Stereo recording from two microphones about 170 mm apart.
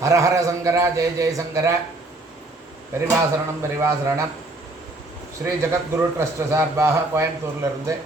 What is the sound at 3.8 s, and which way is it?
Speech, 20° right (ahead or behind).